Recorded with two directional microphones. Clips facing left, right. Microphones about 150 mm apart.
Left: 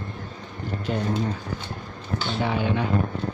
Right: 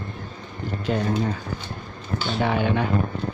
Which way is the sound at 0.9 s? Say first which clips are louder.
Right 3 dB; 90° right.